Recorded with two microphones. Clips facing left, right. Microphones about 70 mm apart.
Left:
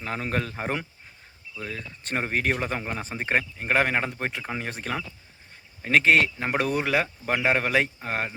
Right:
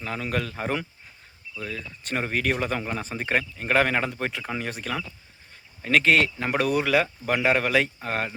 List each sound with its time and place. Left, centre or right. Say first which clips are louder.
0.0 s speech: even; left